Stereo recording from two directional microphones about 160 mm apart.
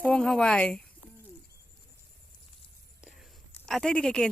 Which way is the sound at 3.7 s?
5° left (ahead or behind).